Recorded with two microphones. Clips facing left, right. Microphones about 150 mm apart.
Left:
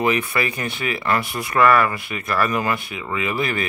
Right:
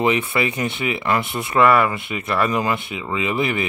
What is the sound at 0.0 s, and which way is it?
Speech, 25° right (ahead or behind).